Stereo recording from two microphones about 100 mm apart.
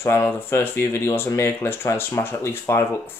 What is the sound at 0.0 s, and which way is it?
Speech, 25° left (ahead or behind).